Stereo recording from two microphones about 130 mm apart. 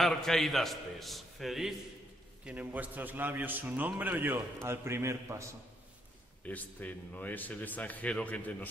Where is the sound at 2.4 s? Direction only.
10° right (ahead or behind).